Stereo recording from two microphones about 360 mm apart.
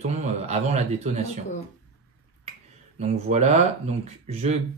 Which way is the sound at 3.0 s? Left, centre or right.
Centre.